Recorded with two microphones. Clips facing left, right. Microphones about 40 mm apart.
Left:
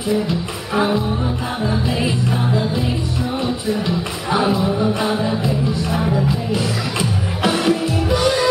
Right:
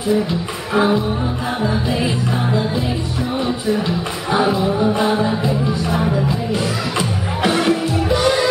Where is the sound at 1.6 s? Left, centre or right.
Centre.